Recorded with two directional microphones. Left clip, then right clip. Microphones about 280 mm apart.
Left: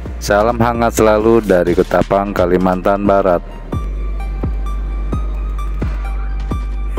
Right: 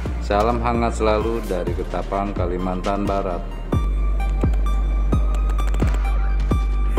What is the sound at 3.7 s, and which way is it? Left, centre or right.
Music, centre.